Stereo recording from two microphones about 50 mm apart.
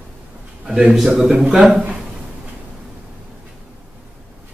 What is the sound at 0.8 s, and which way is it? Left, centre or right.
A man's voice, centre.